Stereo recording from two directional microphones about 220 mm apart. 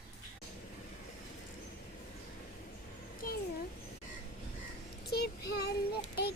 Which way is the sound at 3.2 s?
40° left (ahead or behind).